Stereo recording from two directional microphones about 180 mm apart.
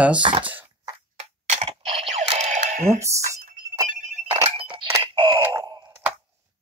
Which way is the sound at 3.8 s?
45° right (ahead or behind).